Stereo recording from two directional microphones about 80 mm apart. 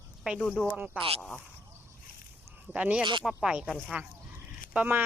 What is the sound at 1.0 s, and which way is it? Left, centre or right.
Speech, centre.